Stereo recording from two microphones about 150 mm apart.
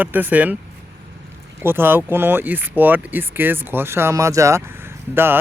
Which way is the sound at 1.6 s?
15° right (ahead or behind).